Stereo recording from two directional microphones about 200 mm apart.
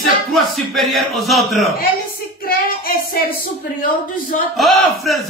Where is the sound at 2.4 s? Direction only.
45° left (ahead or behind).